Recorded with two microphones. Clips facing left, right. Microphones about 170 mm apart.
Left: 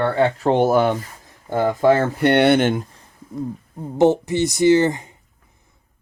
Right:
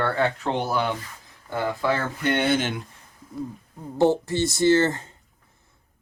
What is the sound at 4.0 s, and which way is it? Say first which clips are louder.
Speech: left 4 dB; 20° left (ahead or behind).